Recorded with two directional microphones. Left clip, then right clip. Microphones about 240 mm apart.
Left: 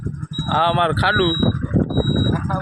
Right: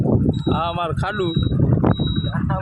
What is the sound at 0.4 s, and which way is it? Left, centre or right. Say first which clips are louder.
Speech: left 5 dB; left.